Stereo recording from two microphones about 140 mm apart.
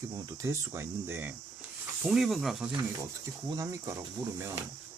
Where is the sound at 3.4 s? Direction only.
25° right (ahead or behind).